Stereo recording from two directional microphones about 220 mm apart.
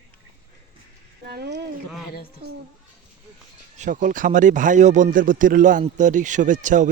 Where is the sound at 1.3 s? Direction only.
50° right (ahead or behind).